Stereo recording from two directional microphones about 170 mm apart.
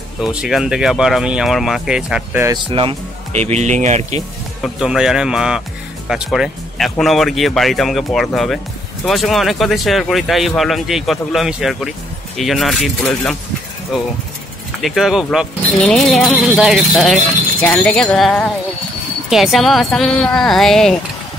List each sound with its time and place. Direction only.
0.2 s speech: 5° right (ahead or behind)
2.4 s speech: 25° right (ahead or behind); by 4.2 s 45° right (ahead or behind)
4.7 s speech: 5° right (ahead or behind)